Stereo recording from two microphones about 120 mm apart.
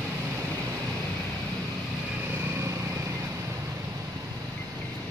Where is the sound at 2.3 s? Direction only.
20° right (ahead or behind).